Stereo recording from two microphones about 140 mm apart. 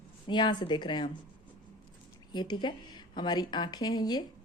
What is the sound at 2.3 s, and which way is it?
A woman's voice, 30° left (ahead or behind).